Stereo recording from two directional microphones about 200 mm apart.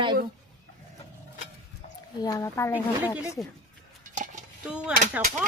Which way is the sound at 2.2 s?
15° left (ahead or behind).